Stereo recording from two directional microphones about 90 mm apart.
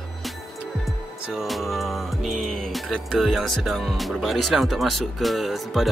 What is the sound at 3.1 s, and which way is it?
Speech, 5° right (ahead or behind).